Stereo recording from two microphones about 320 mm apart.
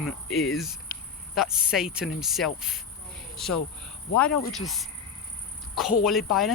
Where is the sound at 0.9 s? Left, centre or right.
Left.